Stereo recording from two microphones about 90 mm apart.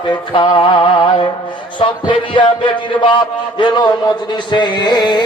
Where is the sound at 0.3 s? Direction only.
65° left (ahead or behind).